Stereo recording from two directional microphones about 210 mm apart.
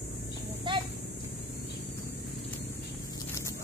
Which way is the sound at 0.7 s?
20° right (ahead or behind).